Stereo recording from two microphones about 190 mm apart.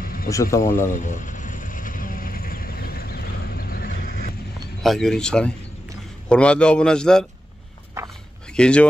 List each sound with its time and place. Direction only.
0.0 s a sound: 50° left (ahead or behind)
0.3 s speech: 15° left (ahead or behind)
0.8 s insect: 45° left (ahead or behind)
4.8 s a man's voice: centre (ahead or behind)
8.0 s a sound: 15° right (ahead or behind)
8.5 s a man's voice: 5° left (ahead or behind)